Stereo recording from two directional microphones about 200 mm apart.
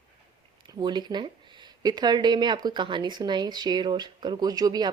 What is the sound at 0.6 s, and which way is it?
Speech, 20° right (ahead or behind).